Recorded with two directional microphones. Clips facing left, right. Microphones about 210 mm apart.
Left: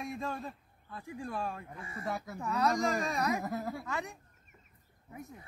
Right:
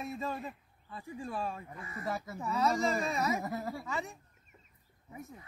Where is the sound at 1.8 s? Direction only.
30° left (ahead or behind).